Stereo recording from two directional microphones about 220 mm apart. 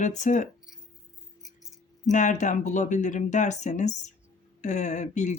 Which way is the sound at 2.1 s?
35° left (ahead or behind).